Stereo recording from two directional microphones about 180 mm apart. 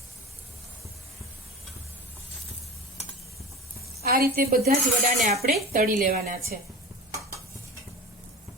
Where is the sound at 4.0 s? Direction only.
55° right (ahead or behind).